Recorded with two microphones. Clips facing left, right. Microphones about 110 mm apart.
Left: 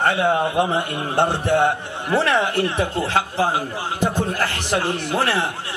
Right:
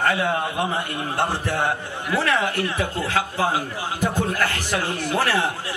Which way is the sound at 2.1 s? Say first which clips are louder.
Left 3 dB; 30° left (ahead or behind).